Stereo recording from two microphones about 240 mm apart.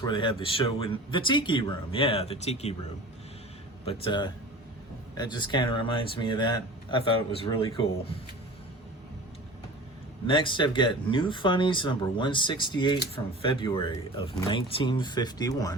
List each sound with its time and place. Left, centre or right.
0.0 s speech: centre
3.8 s speech: left
10.2 s speech: left